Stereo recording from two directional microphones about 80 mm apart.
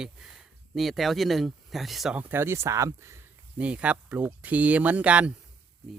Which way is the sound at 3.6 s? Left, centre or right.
Centre.